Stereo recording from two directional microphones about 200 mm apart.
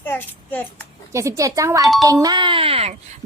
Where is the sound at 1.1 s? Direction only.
15° right (ahead or behind).